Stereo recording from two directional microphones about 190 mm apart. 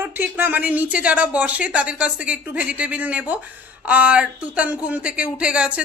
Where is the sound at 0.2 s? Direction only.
10° right (ahead or behind).